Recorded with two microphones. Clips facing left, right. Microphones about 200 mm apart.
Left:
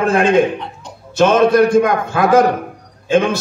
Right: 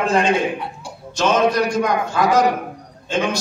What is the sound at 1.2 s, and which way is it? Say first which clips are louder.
A man's voice: left 6 dB; 55° left (ahead or behind).